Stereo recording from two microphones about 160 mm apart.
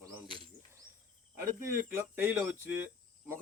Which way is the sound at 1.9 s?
15° right (ahead or behind).